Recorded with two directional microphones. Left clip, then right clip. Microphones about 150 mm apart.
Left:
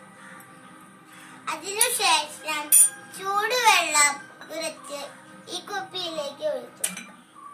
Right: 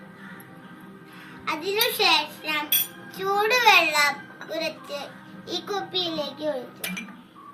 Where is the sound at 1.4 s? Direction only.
15° left (ahead or behind).